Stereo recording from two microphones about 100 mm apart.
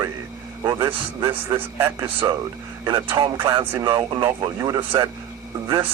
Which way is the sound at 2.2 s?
35° right (ahead or behind).